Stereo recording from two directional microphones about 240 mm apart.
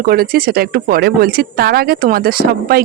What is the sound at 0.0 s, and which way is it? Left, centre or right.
Speech, right.